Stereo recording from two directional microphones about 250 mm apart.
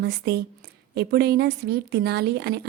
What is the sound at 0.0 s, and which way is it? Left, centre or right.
A woman's voice, right.